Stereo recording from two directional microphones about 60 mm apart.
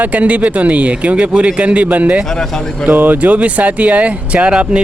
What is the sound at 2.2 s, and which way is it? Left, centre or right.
Speech, centre.